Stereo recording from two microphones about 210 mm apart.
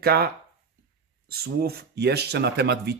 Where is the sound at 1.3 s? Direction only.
50° right (ahead or behind).